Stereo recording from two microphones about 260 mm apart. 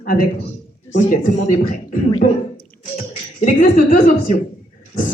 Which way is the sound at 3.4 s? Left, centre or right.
Left.